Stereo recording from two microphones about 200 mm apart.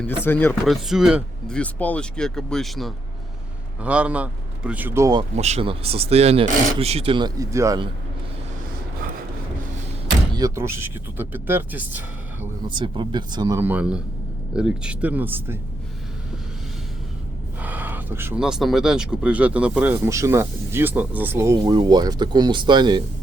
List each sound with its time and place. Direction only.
0.3 s speech: 10° left (ahead or behind)
0.6 s speech: centre (ahead or behind)
5.4 s speech: 30° right (ahead or behind); by 7.9 s 15° right (ahead or behind)
10.3 s speech: 15° right (ahead or behind)
12.6 s speech: 25° right (ahead or behind)
17.6 s speech: 10° right (ahead or behind)